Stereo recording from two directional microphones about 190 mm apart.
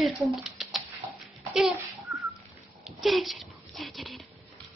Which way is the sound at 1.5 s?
Centre (ahead or behind).